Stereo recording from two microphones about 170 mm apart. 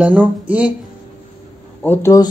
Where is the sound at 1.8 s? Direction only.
15° left (ahead or behind).